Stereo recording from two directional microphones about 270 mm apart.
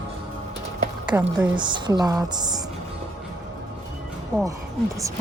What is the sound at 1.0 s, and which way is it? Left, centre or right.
A woman's voice, centre.